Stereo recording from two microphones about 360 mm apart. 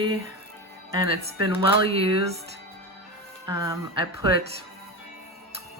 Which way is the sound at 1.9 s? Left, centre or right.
Centre.